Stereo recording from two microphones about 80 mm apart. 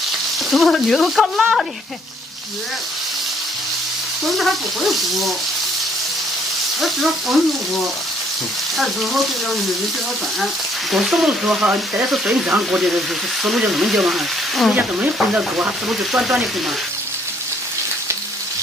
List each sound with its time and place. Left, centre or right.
0.5 s speech: centre
4.3 s speech: centre
6.8 s speech: centre
8.7 s speech: centre
14.7 s speech: centre
15.9 s speech: centre